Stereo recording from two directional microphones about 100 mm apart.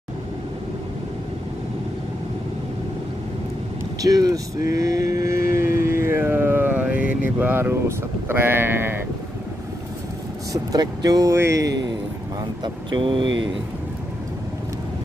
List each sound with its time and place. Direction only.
4.0 s vehicle: 40° right (ahead or behind); by 7.7 s 20° right (ahead or behind)
8.3 s speech: 20° right (ahead or behind)
10.5 s speech: 40° right (ahead or behind)
12.4 s speech: 50° right (ahead or behind)